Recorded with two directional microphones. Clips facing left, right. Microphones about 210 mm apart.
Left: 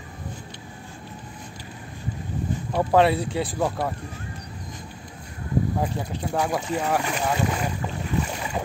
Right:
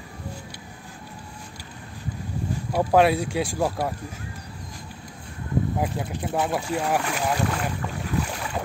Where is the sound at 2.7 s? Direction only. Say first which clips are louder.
Even; 10° right (ahead or behind).